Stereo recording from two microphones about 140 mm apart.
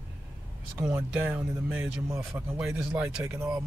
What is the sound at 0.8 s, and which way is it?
Speech, 15° right (ahead or behind).